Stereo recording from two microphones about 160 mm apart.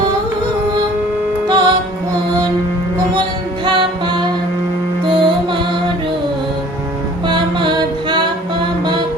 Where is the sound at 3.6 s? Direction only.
30° right (ahead or behind).